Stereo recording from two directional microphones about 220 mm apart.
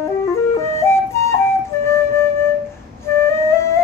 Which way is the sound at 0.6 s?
10° left (ahead or behind).